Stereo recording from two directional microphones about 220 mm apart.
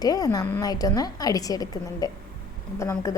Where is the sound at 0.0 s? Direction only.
15° left (ahead or behind).